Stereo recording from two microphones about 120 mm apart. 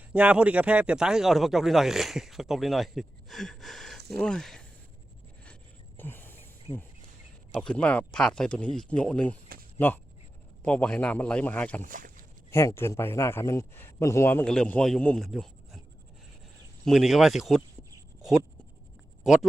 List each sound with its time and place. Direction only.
0.1 s speech: 10° right (ahead or behind)
6.0 s a sound: 15° left (ahead or behind)
7.5 s speech: 10° left (ahead or behind)
12.5 s a man's voice: 20° left (ahead or behind)
14.4 s speech: 5° left (ahead or behind)
16.8 s speech: centre (ahead or behind)
18.2 s a sound: 5° right (ahead or behind)
19.2 s speech: centre (ahead or behind)